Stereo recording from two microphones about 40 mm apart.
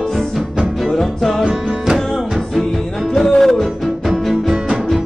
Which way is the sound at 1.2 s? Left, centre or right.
Centre.